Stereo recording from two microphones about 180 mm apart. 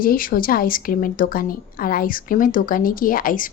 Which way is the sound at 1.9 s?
50° left (ahead or behind).